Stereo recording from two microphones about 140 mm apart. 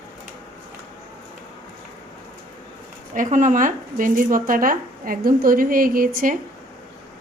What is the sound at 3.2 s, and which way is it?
Speech, 65° right (ahead or behind).